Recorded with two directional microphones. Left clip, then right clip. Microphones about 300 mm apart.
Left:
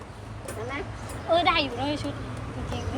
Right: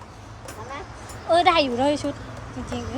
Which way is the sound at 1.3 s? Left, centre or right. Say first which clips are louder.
Right 5 dB; centre.